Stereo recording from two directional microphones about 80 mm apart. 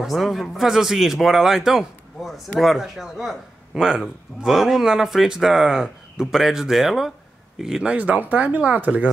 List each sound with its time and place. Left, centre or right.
0.0 s speech: centre